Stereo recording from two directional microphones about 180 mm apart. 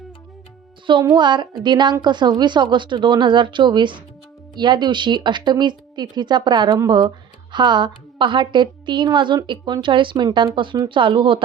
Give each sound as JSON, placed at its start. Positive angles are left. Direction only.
{"t": 1.1, "sound": "a woman's voice", "side_deg": -25}